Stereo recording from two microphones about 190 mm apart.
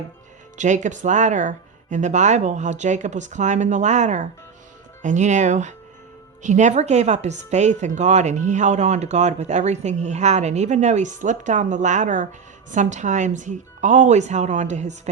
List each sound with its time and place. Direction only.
0.5 s speech: 40° right (ahead or behind)